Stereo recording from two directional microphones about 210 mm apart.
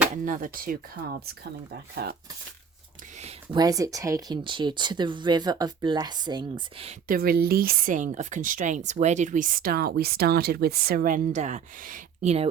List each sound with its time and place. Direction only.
0.3 s speech: 40° right (ahead or behind)
3.2 s a sound: 30° right (ahead or behind)
3.6 s speech: 15° right (ahead or behind)
7.1 s speech: 45° right (ahead or behind)